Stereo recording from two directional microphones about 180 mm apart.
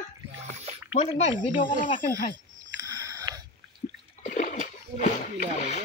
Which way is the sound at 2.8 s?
20° right (ahead or behind).